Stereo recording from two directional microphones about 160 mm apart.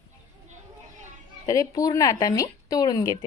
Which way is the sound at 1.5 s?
20° left (ahead or behind).